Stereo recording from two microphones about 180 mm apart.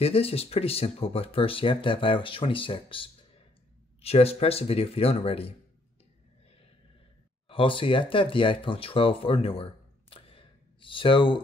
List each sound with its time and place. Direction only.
0.0 s speech: 30° left (ahead or behind)
7.4 s speech: 30° left (ahead or behind)